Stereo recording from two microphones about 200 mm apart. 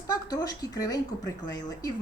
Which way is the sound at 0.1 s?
20° left (ahead or behind).